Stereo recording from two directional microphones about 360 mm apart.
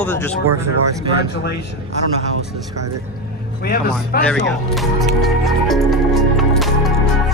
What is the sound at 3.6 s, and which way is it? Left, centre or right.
Speech, left.